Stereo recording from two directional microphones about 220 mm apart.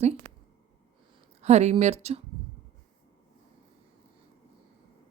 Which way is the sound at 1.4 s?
30° right (ahead or behind).